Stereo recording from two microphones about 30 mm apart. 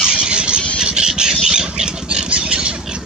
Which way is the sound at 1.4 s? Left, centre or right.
Right.